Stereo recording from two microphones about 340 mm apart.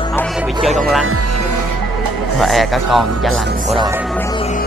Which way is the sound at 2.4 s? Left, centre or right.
Centre.